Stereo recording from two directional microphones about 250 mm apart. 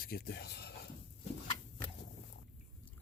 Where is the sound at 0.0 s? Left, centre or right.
Left.